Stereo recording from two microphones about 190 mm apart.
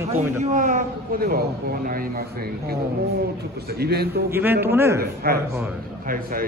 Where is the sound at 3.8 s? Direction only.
55° right (ahead or behind).